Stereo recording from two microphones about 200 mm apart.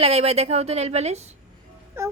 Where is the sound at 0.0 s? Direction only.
30° right (ahead or behind).